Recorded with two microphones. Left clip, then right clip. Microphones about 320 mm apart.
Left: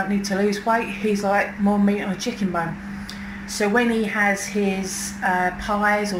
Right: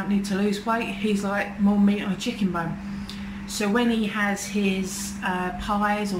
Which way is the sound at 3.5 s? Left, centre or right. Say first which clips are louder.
Left 4 dB; centre.